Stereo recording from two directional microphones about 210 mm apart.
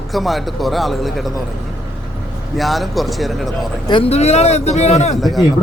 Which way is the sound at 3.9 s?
25° left (ahead or behind).